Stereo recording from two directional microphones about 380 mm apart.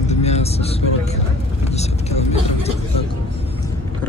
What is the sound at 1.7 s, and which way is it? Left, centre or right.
Vehicle, centre.